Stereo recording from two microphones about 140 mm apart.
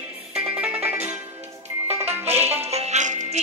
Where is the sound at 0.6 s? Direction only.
10° right (ahead or behind).